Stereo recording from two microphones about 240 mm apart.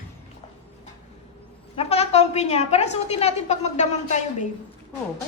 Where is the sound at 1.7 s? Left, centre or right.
Left.